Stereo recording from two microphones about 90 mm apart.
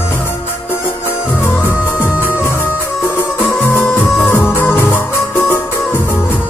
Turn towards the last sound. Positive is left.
turn(degrees=25)  # may be behind; listen again after turning